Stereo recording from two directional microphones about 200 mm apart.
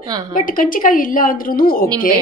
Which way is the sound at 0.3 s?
45° left (ahead or behind).